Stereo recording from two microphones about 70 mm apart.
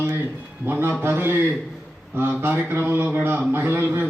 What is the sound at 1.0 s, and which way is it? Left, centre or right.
A man's voice, right.